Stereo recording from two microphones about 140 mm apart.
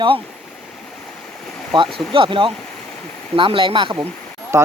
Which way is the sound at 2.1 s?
40° right (ahead or behind).